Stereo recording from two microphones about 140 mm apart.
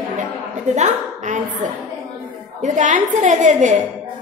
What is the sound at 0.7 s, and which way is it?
A woman's voice, 60° right (ahead or behind).